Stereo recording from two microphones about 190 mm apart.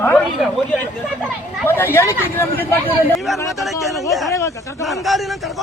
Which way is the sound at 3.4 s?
15° left (ahead or behind).